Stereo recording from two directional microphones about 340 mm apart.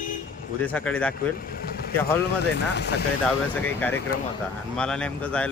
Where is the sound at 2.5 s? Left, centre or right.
Left.